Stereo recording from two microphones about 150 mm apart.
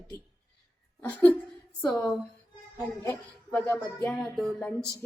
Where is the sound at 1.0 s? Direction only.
10° left (ahead or behind).